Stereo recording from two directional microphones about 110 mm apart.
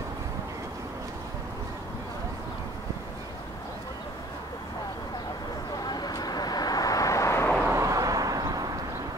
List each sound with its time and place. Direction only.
5.9 s vehicle: 40° left (ahead or behind)
7.6 s vehicle: 30° right (ahead or behind)